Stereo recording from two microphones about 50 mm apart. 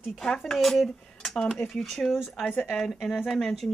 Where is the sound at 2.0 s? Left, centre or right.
Left.